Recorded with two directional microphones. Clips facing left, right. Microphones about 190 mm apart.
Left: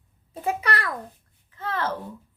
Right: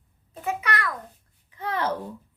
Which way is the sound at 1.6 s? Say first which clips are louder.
Right 1 dB; 15° right (ahead or behind).